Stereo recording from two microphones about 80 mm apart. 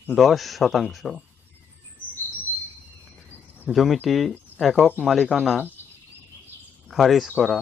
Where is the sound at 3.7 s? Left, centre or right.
Centre.